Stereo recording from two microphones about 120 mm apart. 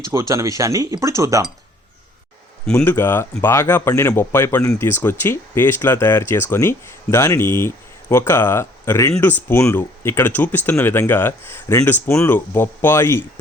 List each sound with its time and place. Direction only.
0.0 s speech: 25° right (ahead or behind)
2.7 s speech: 15° left (ahead or behind)